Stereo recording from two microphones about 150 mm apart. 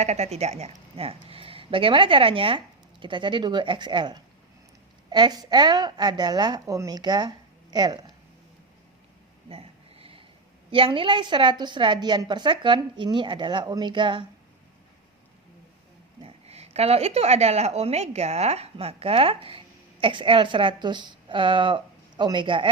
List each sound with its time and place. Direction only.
0.0 s a woman's voice: 45° right (ahead or behind); by 8.1 s 30° right (ahead or behind)
9.5 s a sound: 40° right (ahead or behind)
10.7 s a woman's voice: 35° right (ahead or behind)
16.2 s a woman's voice: 45° right (ahead or behind)